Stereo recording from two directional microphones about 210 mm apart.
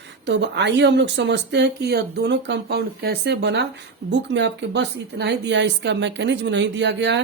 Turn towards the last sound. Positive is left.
turn(degrees=-55)  # may be behind; listen again after turning